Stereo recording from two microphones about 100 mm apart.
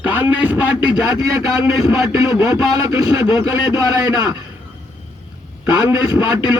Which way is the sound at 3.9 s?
40° right (ahead or behind).